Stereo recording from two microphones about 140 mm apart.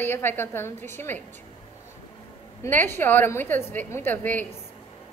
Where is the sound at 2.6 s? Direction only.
15° left (ahead or behind).